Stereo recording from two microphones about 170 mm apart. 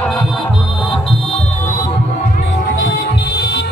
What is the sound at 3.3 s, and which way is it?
Music, 75° left (ahead or behind).